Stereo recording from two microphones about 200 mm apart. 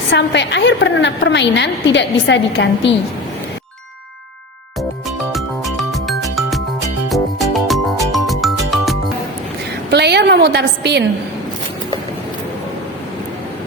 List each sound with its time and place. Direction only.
0.1 s a woman's voice: 60° left (ahead or behind)
5.3 s music: centre (ahead or behind)
9.9 s a sound: 55° right (ahead or behind)